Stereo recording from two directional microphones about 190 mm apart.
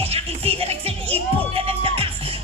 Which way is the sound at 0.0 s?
30° right (ahead or behind).